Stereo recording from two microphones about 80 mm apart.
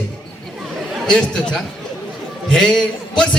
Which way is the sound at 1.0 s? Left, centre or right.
Centre.